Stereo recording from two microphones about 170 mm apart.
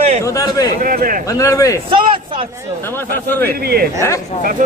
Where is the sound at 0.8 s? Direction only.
55° right (ahead or behind).